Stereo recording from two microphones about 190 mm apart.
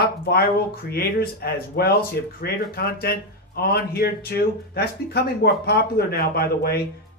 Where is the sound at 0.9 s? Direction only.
55° left (ahead or behind).